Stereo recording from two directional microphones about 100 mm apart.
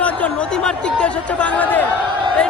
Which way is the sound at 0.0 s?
10° left (ahead or behind).